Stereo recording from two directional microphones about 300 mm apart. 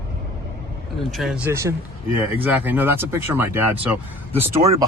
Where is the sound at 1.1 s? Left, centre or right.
Centre.